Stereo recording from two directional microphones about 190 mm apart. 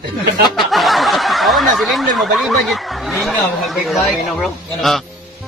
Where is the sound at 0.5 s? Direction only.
Centre (ahead or behind).